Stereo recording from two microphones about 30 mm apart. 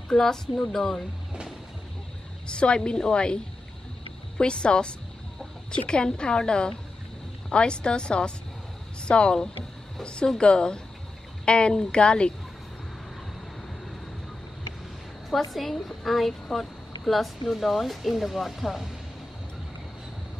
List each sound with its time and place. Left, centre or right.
0.1 s a woman's voice: centre
2.4 s a woman's voice: left
4.4 s a woman's voice: left
15.2 s a woman's voice: centre